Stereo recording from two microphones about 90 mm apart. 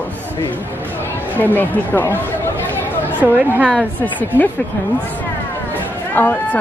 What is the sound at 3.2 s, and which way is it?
Speech, 15° right (ahead or behind).